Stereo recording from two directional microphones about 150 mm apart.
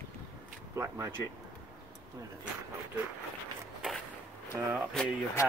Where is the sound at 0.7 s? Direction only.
20° right (ahead or behind).